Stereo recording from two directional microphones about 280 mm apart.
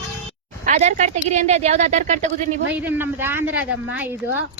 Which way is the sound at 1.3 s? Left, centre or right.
Right.